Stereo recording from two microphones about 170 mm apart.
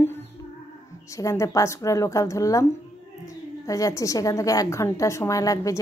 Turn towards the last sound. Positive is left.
turn(degrees=20)  # may be behind; listen again after turning